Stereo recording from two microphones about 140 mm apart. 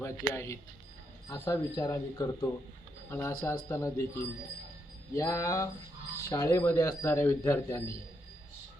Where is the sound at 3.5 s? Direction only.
20° left (ahead or behind).